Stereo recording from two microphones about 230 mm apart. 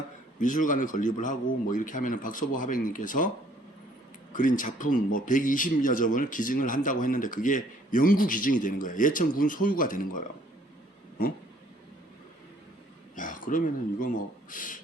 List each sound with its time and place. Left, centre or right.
0.3 s speech: left
4.3 s speech: left
13.1 s a sound: left
14.5 s speech: left